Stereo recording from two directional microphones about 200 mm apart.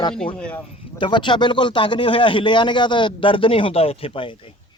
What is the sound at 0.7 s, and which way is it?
Speech, 25° left (ahead or behind).